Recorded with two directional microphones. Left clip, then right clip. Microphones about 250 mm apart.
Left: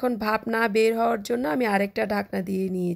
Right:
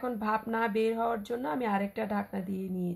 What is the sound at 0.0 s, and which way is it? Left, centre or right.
Speech, left.